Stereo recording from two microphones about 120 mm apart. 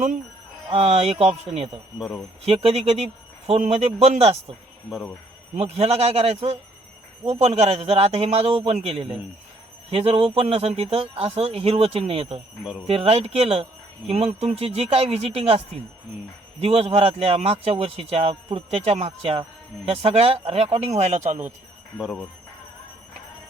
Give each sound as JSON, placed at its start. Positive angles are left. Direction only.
{"t": 0.7, "sound": "speech", "side_deg": -60}
{"t": 5.5, "sound": "speech", "side_deg": -60}
{"t": 21.9, "sound": "speech", "side_deg": 0}